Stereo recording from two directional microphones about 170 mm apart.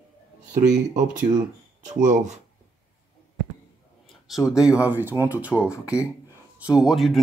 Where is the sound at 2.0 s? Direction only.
45° right (ahead or behind).